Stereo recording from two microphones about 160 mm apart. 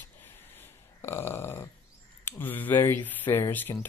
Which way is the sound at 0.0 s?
10° left (ahead or behind).